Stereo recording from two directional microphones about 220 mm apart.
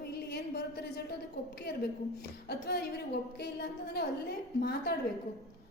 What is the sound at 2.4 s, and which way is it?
A woman's voice, 50° left (ahead or behind).